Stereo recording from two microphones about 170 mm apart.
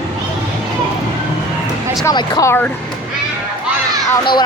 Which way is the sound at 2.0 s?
20° left (ahead or behind).